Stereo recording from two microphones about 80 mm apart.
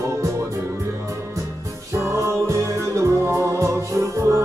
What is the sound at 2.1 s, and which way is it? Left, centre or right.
Music, right.